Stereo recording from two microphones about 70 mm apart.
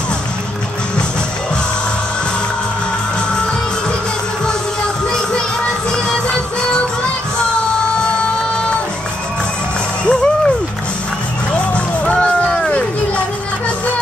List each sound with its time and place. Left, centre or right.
5.9 s music: centre
10.0 s music: centre
11.5 s music: centre